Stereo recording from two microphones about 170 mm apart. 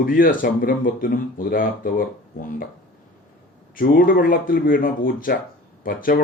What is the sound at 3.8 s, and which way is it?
Speech, 60° left (ahead or behind).